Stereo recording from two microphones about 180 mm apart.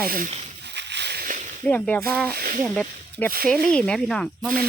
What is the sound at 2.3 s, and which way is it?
Speech, 55° right (ahead or behind).